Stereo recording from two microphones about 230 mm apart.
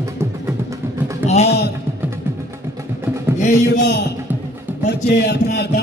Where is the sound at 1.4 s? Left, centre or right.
Left.